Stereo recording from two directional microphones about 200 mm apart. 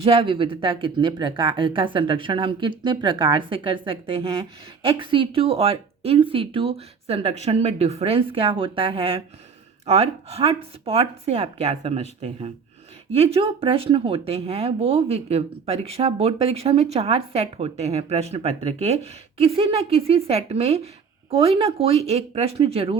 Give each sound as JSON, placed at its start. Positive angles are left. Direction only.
{"t": 0.0, "sound": "speech", "side_deg": -30}
{"t": 13.1, "sound": "speech", "side_deg": -30}